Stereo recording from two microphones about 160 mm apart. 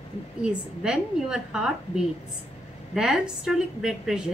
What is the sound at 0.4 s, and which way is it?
A woman's voice, 5° right (ahead or behind).